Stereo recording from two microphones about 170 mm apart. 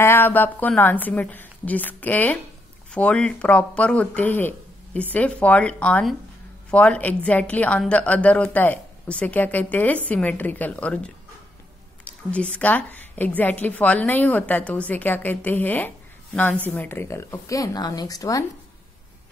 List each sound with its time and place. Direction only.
0.0 s a woman's voice: 10° left (ahead or behind)